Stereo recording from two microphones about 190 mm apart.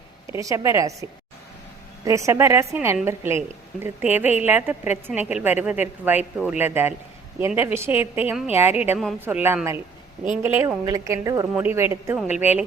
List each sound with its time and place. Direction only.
0.3 s a woman's voice: 15° right (ahead or behind)
2.0 s a woman's voice: 15° right (ahead or behind)
12.3 s a woman's voice: 35° left (ahead or behind)